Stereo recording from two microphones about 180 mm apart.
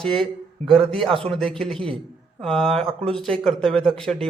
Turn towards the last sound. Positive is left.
turn(degrees=5)  # may be behind; listen again after turning